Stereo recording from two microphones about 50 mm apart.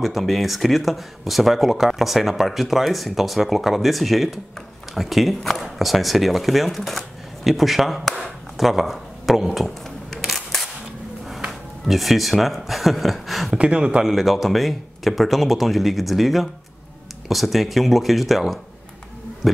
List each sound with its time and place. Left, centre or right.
0.0 s speech: centre
11.8 s speech: centre
13.5 s speech: right
14.0 s speech: centre
19.4 s heart sounds: centre